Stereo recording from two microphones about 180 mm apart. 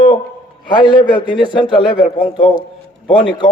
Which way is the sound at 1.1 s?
25° left (ahead or behind).